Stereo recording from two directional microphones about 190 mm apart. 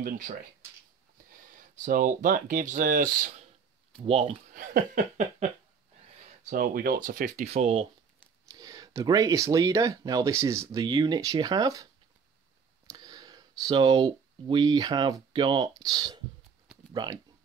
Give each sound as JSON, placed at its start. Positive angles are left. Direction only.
{"t": 0.0, "sound": "speech", "side_deg": -45}
{"t": 1.5, "sound": "speech", "side_deg": -45}
{"t": 4.0, "sound": "speech", "side_deg": -30}
{"t": 4.6, "sound": "a sound", "side_deg": -40}
{"t": 6.4, "sound": "speech", "side_deg": -50}
{"t": 8.5, "sound": "speech", "side_deg": -20}